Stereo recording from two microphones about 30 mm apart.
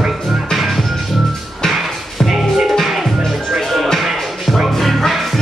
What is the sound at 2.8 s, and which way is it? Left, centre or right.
Music, centre.